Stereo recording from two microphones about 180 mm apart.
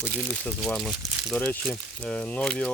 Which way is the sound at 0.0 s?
10° left (ahead or behind).